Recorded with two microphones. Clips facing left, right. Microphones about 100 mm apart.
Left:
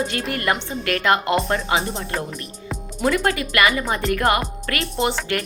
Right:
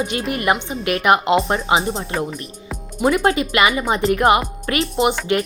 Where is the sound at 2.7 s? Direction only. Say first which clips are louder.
Right 3 dB; 15° right (ahead or behind).